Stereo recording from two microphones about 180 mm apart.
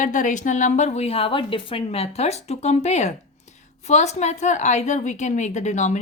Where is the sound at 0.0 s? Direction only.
45° left (ahead or behind).